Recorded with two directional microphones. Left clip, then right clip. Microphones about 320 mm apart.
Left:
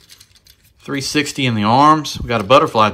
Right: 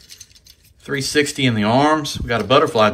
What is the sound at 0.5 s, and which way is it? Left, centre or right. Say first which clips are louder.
Speech: even; centre.